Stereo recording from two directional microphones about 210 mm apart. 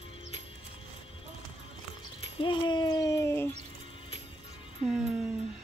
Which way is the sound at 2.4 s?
25° left (ahead or behind).